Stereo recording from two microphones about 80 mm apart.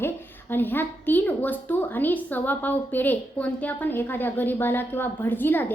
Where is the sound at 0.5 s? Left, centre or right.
Left.